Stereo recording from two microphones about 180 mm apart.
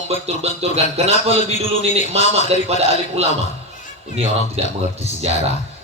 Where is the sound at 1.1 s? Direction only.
40° left (ahead or behind).